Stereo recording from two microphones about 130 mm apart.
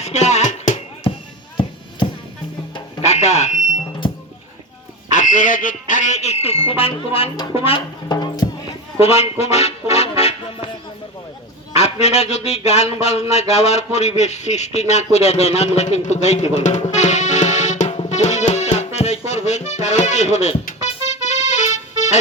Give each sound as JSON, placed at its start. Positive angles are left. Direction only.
{"t": 0.0, "sound": "a sound", "side_deg": 60}
{"t": 1.1, "sound": "music", "side_deg": 45}
{"t": 3.0, "sound": "fire alarm", "side_deg": 60}
{"t": 5.1, "sound": "a man's voice", "side_deg": 80}
{"t": 7.5, "sound": "music", "side_deg": 45}
{"t": 8.1, "sound": "music", "side_deg": 30}
{"t": 9.0, "sound": "music", "side_deg": 50}
{"t": 11.7, "sound": "a man's voice", "side_deg": 55}
{"t": 13.5, "sound": "a sound", "side_deg": 55}
{"t": 20.8, "sound": "music", "side_deg": 60}